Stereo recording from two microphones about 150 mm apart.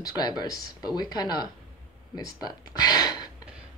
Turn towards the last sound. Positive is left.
turn(degrees=25)  # may be behind; listen again after turning